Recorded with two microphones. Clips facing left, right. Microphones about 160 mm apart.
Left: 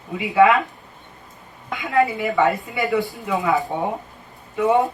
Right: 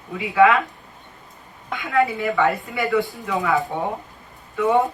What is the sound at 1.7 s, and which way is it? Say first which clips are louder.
Speech: left 1 dB; 20° left (ahead or behind).